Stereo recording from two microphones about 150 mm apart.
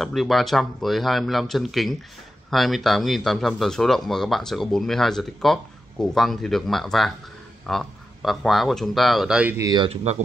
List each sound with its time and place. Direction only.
0.0 s speech: centre (ahead or behind)
9.6 s speech: 25° right (ahead or behind)
10.1 s speech: 45° right (ahead or behind)